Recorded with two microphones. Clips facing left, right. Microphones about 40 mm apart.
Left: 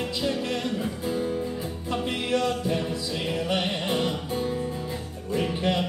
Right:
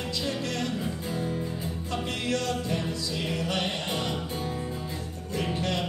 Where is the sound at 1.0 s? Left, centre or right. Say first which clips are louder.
Left 4 dB; centre.